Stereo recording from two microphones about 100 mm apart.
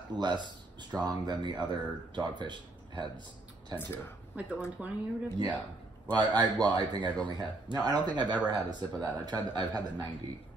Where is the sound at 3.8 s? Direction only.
25° left (ahead or behind).